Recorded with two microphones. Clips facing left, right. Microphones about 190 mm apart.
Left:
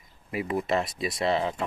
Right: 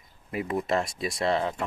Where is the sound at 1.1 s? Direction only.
25° left (ahead or behind).